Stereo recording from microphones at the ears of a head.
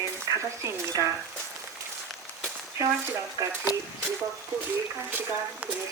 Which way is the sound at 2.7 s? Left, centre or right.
Right.